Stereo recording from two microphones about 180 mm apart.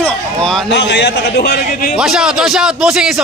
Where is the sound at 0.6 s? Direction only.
70° left (ahead or behind); by 1.9 s 55° left (ahead or behind).